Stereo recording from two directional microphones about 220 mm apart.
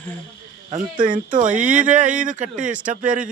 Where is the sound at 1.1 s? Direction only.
35° right (ahead or behind).